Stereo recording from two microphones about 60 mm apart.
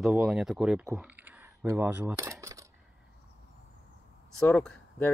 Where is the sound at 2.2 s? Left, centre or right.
Right.